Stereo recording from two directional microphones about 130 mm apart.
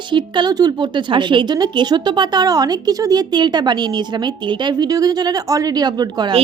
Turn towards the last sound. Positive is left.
turn(degrees=-35)  # may be behind; listen again after turning